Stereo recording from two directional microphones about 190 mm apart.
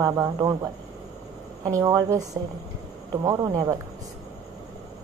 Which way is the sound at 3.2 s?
20° right (ahead or behind).